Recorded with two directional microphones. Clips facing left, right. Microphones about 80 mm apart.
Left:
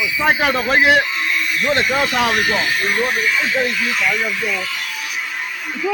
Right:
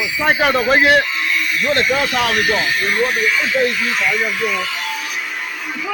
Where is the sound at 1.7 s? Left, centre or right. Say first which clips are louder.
Right 1 dB; centre.